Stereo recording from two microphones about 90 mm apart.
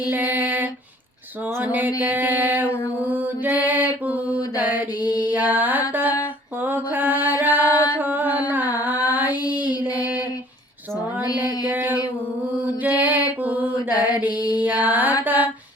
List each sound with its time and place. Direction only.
0.1 s female singing: 20° right (ahead or behind)
1.6 s mantra: 15° right (ahead or behind)
2.0 s music: 20° right (ahead or behind)
3.0 s mantra: 15° right (ahead or behind)
5.2 s music: 20° right (ahead or behind)
5.9 s mantra: 20° right (ahead or behind)
9.4 s child singing: 50° left (ahead or behind)
11.3 s music: 20° right (ahead or behind)
13.0 s mantra: 20° right (ahead or behind)
13.9 s mantra: 50° left (ahead or behind)
14.6 s music: 15° right (ahead or behind)